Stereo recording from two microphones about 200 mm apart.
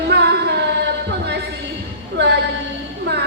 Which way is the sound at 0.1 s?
55° right (ahead or behind).